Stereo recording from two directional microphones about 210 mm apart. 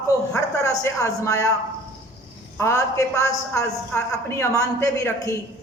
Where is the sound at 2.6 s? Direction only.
15° left (ahead or behind).